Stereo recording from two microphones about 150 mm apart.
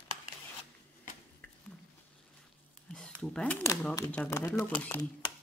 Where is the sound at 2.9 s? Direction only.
5° left (ahead or behind).